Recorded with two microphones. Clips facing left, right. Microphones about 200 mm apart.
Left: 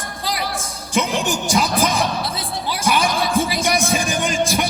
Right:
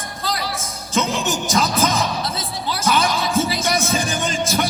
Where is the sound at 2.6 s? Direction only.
10° left (ahead or behind).